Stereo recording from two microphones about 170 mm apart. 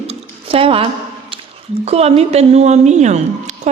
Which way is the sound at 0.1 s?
35° right (ahead or behind).